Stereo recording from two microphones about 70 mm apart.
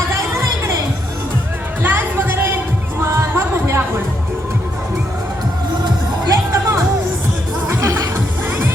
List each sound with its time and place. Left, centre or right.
1.8 s chatter: right
3.0 s music: right
5.8 s music: right